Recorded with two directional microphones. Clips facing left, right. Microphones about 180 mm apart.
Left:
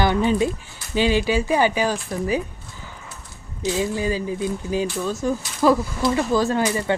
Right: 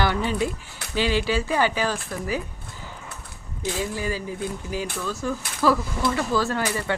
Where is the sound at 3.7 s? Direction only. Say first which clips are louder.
Left 5 dB; 20° left (ahead or behind).